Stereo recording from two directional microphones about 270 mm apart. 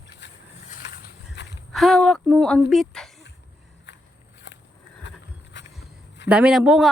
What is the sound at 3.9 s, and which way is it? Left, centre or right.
Walk, left.